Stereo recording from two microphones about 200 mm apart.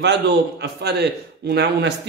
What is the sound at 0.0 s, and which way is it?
A man's voice, 60° right (ahead or behind).